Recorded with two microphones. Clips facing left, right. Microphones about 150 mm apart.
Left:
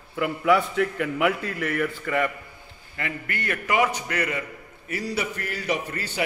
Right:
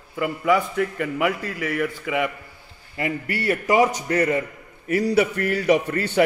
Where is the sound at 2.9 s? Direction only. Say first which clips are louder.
Right 6 dB; 20° right (ahead or behind).